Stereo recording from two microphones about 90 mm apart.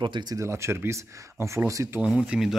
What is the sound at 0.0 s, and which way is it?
Speech, 55° right (ahead or behind).